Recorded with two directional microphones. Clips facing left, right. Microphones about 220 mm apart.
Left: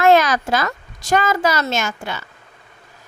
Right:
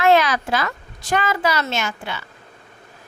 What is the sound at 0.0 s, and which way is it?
A woman's voice, 45° left (ahead or behind).